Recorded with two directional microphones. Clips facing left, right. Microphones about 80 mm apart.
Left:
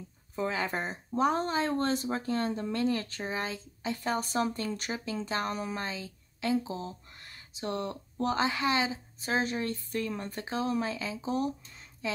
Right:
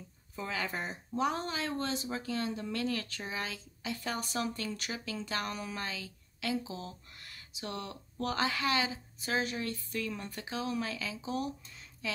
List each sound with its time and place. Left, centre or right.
0.4 s speech: left